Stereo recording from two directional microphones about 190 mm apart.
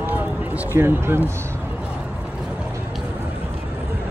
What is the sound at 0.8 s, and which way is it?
Speech, 10° right (ahead or behind).